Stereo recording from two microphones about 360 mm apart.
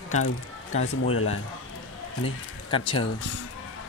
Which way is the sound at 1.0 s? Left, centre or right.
Left.